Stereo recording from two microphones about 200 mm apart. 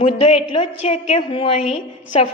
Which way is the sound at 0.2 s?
30° left (ahead or behind).